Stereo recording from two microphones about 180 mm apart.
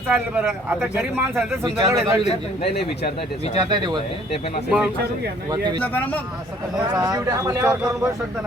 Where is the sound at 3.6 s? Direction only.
25° right (ahead or behind).